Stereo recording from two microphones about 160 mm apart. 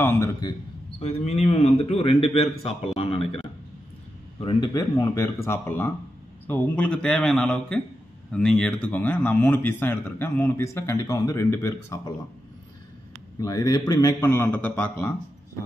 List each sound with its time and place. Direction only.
0.0 s speech: 15° left (ahead or behind)
1.0 s a man's voice: 40° left (ahead or behind); by 12.1 s 20° left (ahead or behind)
13.4 s a man's voice: 20° left (ahead or behind)